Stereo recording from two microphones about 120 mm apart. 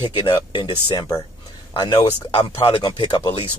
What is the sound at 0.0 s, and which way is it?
Speech, 40° left (ahead or behind).